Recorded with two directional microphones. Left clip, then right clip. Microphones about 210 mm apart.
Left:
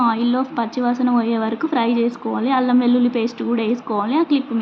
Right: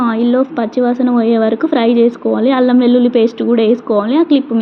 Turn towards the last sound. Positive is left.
turn(degrees=-15)  # may be behind; listen again after turning